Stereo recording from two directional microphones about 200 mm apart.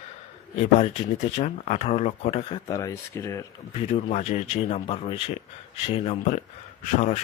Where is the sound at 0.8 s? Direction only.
35° left (ahead or behind).